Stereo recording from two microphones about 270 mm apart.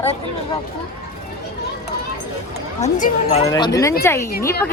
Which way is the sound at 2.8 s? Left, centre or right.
Left.